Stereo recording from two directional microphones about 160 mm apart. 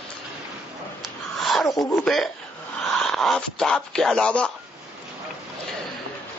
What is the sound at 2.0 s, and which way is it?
Speech, centre (ahead or behind).